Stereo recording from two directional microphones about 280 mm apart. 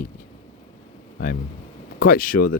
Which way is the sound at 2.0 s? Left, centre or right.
Left.